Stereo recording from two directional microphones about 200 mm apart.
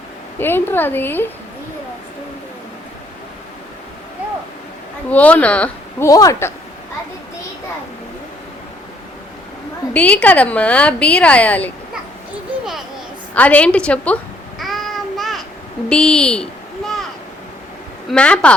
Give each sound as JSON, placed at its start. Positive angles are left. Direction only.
{"t": 0.3, "sound": "a woman's voice", "side_deg": 10}
{"t": 5.0, "sound": "a woman's voice", "side_deg": 5}
{"t": 6.1, "sound": "a woman's voice", "side_deg": 15}
{"t": 9.9, "sound": "a woman's voice", "side_deg": 5}
{"t": 13.3, "sound": "a woman's voice", "side_deg": 5}
{"t": 14.6, "sound": "child singing", "side_deg": 0}
{"t": 15.9, "sound": "a sound", "side_deg": 5}
{"t": 18.1, "sound": "speech", "side_deg": 5}